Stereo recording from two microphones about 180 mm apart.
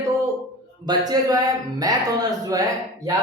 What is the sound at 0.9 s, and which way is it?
A man's voice, 20° right (ahead or behind).